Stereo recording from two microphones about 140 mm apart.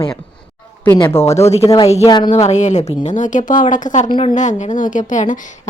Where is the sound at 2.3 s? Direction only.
55° left (ahead or behind).